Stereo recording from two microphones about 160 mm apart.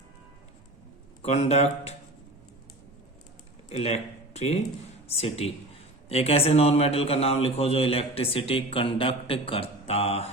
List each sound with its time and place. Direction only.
1.2 s a man's voice: 45° left (ahead or behind)
3.7 s a man's voice: 45° left (ahead or behind)